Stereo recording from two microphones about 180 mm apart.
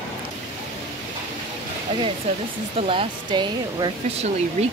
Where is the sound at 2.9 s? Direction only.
30° right (ahead or behind).